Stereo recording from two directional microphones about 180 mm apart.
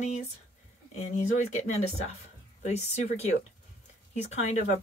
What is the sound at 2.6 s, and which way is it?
Speech, 35° left (ahead or behind).